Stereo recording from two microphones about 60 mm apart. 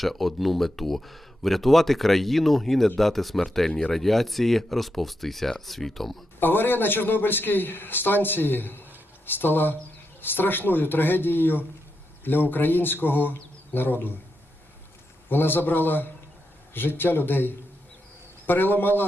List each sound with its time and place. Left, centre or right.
0.0 s speech: centre
6.4 s a man's voice: left
15.3 s a man's voice: left